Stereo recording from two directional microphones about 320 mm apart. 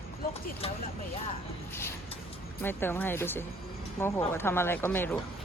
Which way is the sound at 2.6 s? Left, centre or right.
Centre.